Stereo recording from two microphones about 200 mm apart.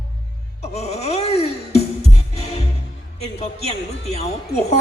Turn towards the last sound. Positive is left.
turn(degrees=30)  # may be behind; listen again after turning